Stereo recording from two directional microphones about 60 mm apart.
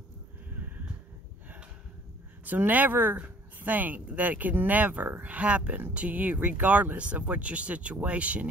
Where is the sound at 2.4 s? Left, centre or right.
Right.